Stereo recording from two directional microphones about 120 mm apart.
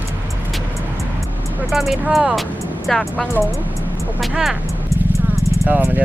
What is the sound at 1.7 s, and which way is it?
Speech, centre (ahead or behind).